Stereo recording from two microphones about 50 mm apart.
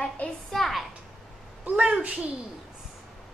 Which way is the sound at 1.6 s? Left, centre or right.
Right.